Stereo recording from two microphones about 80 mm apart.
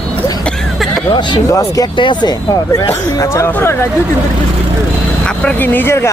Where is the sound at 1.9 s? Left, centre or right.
Left.